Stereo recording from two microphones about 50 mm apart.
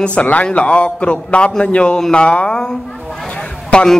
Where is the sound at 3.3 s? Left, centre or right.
Centre.